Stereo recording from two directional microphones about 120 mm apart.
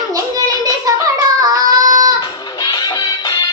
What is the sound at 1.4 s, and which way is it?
Child singing, 30° right (ahead or behind).